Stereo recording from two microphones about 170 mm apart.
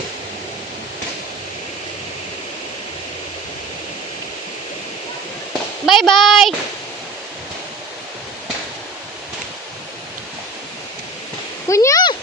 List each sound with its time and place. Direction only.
5.8 s speech: centre (ahead or behind)
11.7 s speech: 20° left (ahead or behind)